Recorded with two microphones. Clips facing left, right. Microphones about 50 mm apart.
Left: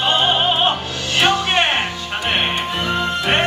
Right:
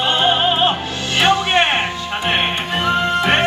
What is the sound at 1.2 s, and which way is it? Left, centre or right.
Music, right.